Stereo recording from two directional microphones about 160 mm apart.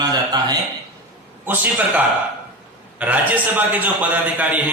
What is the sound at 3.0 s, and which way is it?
A man's voice, 10° right (ahead or behind).